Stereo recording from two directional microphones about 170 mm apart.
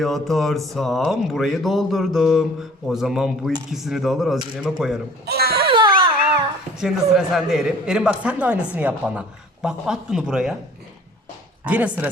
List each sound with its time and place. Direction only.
0.0 s speech: centre (ahead or behind)
5.2 s a child's voice: 70° right (ahead or behind)
5.6 s music: 30° right (ahead or behind)
6.7 s speech: 5° right (ahead or behind)
11.6 s speech: 10° right (ahead or behind)